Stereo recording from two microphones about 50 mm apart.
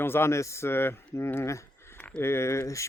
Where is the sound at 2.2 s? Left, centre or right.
Left.